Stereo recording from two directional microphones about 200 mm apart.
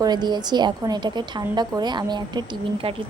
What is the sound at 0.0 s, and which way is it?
A woman's voice, 20° right (ahead or behind).